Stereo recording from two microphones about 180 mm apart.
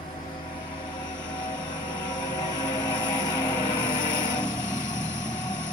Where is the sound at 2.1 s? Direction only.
25° left (ahead or behind).